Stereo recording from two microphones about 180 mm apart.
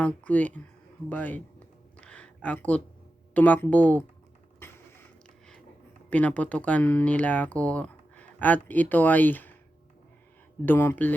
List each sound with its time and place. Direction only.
0.0 s speech: 10° left (ahead or behind)
1.1 s a sound: 10° left (ahead or behind)
3.3 s speech: 10° left (ahead or behind)
4.6 s a sound: 10° left (ahead or behind)
6.1 s speech: 10° left (ahead or behind)
10.7 s speech: 10° left (ahead or behind)